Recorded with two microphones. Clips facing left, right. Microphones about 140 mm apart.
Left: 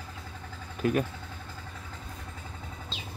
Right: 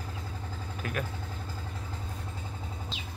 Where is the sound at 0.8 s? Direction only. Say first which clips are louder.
Left 9 dB; 35° left (ahead or behind).